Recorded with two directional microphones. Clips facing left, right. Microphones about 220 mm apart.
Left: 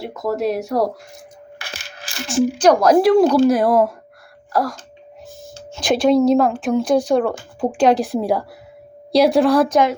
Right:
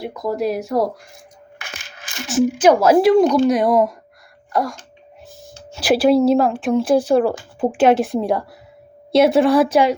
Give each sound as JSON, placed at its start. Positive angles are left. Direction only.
{"t": 0.0, "sound": "a woman's voice", "side_deg": 0}
{"t": 1.5, "sound": "coin", "side_deg": 35}
{"t": 2.2, "sound": "a woman's voice", "side_deg": -5}